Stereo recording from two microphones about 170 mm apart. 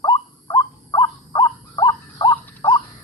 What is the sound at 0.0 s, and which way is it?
Owl, 25° left (ahead or behind).